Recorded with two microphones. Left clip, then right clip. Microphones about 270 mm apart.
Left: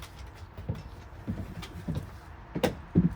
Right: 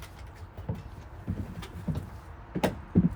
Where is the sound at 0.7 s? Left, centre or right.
Centre.